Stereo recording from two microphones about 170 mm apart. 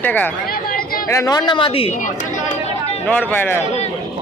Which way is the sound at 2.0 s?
50° left (ahead or behind).